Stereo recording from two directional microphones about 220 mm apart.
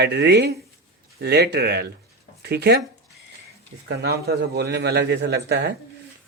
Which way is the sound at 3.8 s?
45° right (ahead or behind).